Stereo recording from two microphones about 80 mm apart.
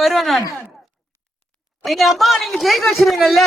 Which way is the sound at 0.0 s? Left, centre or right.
Centre.